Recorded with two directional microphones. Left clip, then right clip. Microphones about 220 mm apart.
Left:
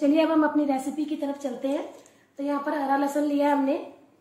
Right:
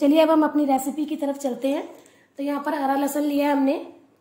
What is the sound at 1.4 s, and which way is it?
A woman's voice, 45° right (ahead or behind).